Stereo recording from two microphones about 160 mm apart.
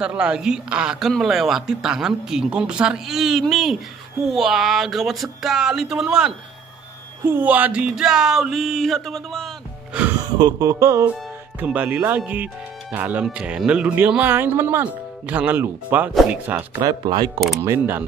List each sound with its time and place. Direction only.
0.0 s speech: 5° right (ahead or behind)
10.3 s speech: 25° right (ahead or behind); by 16.5 s 10° right (ahead or behind)
16.5 s speech: 20° right (ahead or behind)
17.6 s speech: 15° right (ahead or behind)